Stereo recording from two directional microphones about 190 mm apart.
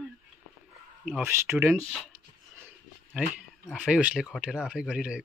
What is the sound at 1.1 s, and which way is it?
Speech, 10° right (ahead or behind).